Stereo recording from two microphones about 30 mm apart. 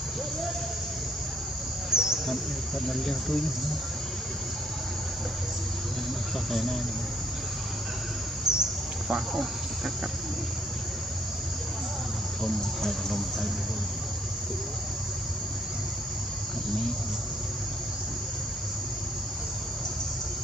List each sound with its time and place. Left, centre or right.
1.9 s insect: right
8.5 s bird: centre